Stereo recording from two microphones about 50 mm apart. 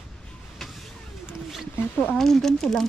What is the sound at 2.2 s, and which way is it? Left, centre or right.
Speech, centre.